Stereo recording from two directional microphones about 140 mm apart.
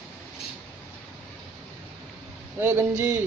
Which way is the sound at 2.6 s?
15° right (ahead or behind).